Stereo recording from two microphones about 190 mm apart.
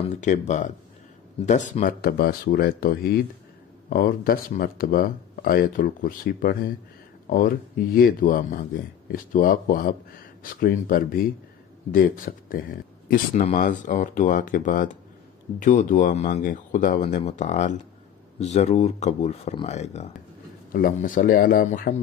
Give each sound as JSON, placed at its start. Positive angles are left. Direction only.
{"t": 0.2, "sound": "speech", "side_deg": 40}
{"t": 20.7, "sound": "speech", "side_deg": 45}